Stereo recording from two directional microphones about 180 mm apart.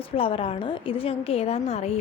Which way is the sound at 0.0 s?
30° left (ahead or behind).